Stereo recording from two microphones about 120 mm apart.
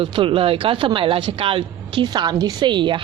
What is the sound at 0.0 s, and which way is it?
A woman's voice, 45° right (ahead or behind).